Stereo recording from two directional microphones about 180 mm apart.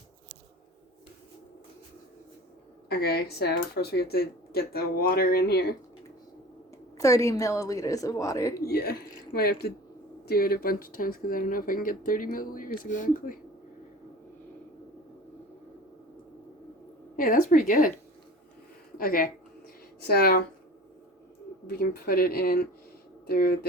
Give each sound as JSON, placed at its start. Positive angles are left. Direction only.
{"t": 2.9, "sound": "speech", "side_deg": 60}
{"t": 6.9, "sound": "a woman's voice", "side_deg": 15}
{"t": 8.6, "sound": "speech", "side_deg": 60}
{"t": 17.2, "sound": "speech", "side_deg": 50}
{"t": 18.9, "sound": "speech", "side_deg": 50}
{"t": 21.7, "sound": "speech", "side_deg": 60}